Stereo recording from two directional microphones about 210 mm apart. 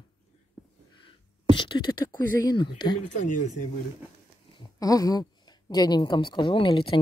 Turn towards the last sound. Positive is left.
turn(degrees=25)  # may be behind; listen again after turning